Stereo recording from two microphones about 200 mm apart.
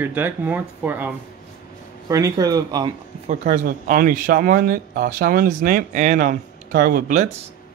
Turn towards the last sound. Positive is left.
turn(degrees=-40)  # may be behind; listen again after turning